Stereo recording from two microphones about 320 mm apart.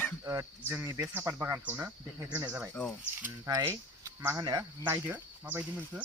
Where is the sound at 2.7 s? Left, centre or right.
Centre.